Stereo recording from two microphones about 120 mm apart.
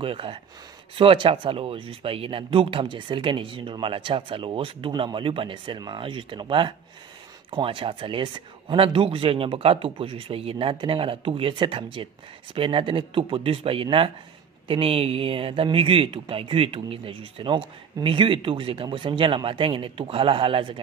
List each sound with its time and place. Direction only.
0.0 s speech: 50° right (ahead or behind)